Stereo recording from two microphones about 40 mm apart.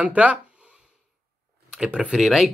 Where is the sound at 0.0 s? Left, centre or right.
Right.